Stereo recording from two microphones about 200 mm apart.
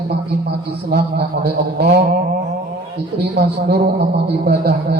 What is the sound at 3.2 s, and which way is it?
A man's voice, 55° right (ahead or behind).